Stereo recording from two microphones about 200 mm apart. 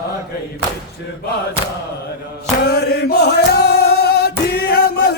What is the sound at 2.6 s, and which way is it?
Chant, 55° left (ahead or behind).